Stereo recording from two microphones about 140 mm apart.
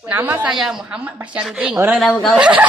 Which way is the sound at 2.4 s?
5° right (ahead or behind).